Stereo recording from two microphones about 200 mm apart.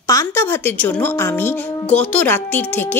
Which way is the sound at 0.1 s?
15° left (ahead or behind).